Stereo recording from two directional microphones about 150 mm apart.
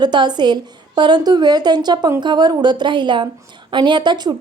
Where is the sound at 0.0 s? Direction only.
30° right (ahead or behind).